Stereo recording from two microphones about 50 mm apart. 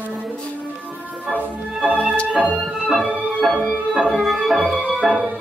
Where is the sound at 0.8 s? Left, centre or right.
Right.